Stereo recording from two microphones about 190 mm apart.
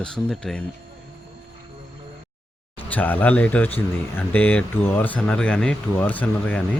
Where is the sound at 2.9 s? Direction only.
10° left (ahead or behind).